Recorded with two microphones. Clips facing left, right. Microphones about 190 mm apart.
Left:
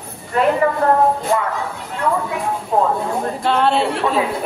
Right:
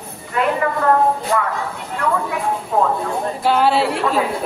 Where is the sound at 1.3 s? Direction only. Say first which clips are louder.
Left 1 dB; 25° left (ahead or behind).